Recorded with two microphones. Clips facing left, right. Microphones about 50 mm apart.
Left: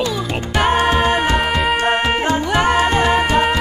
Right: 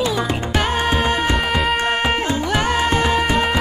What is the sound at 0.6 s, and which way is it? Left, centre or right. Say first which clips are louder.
Music: left 7 dB; left.